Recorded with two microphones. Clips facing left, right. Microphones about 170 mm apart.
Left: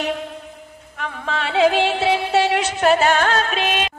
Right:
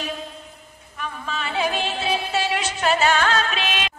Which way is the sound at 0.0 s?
70° left (ahead or behind).